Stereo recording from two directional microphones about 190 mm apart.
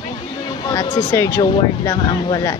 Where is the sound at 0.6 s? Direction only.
20° left (ahead or behind).